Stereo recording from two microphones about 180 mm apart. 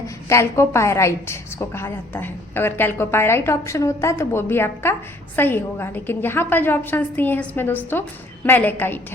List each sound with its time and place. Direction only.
0.3 s a woman's voice: 15° left (ahead or behind)